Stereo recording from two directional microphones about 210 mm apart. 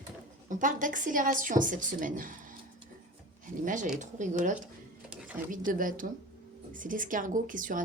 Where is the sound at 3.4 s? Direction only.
35° right (ahead or behind).